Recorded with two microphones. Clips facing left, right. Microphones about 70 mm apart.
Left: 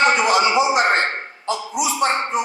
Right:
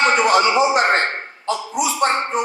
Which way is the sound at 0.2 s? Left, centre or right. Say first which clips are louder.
Right 2 dB; right.